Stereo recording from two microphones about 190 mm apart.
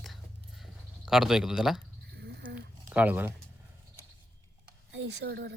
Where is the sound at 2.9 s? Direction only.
10° right (ahead or behind).